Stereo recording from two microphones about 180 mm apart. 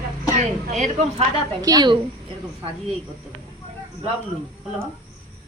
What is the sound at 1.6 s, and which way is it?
Speech, 25° right (ahead or behind).